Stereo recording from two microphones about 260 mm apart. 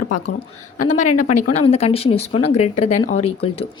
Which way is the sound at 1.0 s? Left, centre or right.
Left.